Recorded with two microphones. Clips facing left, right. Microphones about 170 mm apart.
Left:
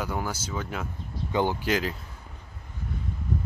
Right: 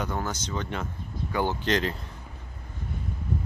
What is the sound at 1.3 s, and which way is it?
Speech, 15° left (ahead or behind).